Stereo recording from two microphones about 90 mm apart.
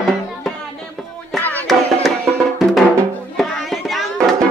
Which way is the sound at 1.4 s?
20° left (ahead or behind).